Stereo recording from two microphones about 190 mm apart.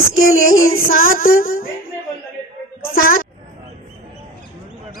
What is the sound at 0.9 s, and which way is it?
Speech, 50° left (ahead or behind).